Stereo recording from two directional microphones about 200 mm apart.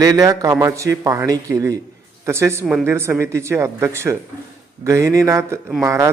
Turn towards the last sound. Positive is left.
turn(degrees=-15)  # may be behind; listen again after turning